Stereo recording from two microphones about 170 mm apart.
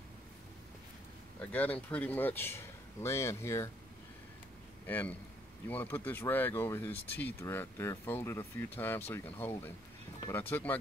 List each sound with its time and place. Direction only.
1.4 s speech: 10° left (ahead or behind)
4.8 s a man's voice: 10° left (ahead or behind)